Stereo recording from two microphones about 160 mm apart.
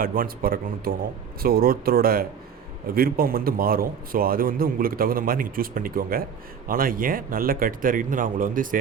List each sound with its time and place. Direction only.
0.0 s a man's voice: 65° right (ahead or behind)